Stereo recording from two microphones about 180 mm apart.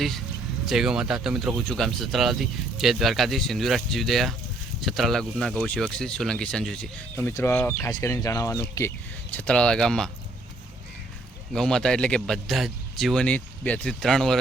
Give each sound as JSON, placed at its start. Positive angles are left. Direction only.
{"t": 0.6, "sound": "speech", "side_deg": 0}
{"t": 9.3, "sound": "speech", "side_deg": 5}
{"t": 11.5, "sound": "speech", "side_deg": 5}